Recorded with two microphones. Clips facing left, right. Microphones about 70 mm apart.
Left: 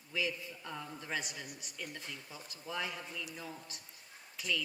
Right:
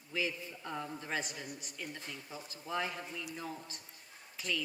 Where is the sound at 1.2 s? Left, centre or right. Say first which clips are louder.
Right 2 dB; right.